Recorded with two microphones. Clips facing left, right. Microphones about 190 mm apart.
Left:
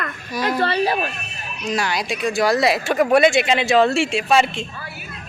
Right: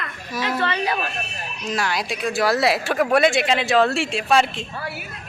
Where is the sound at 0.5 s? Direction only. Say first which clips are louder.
Left 4 dB; 35° left (ahead or behind).